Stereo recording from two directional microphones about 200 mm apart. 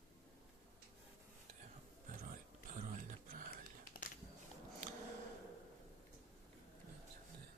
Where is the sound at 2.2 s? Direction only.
45° right (ahead or behind).